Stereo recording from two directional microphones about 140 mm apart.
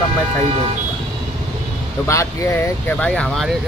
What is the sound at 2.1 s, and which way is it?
Speech, 20° left (ahead or behind).